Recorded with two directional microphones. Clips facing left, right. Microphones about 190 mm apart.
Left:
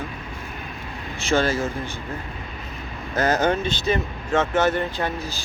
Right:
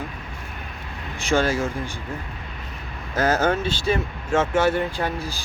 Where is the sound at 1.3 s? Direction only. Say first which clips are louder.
Even; 10° right (ahead or behind).